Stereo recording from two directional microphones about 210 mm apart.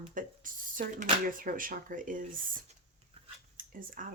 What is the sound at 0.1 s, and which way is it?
Speech, 40° right (ahead or behind).